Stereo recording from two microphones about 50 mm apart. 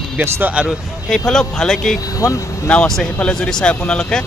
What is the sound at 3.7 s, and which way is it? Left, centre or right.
Speech, left.